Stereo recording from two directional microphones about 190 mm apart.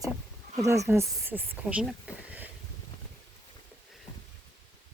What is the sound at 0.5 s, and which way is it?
Speech, 15° right (ahead or behind).